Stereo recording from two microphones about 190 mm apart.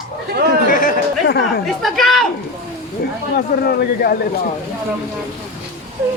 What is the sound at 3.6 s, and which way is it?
Speech, 55° left (ahead or behind).